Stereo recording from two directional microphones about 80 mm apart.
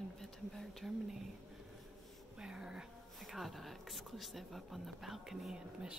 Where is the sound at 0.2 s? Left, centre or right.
Centre.